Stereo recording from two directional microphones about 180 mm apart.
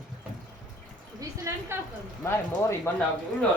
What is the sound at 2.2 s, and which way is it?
Speech, 15° left (ahead or behind).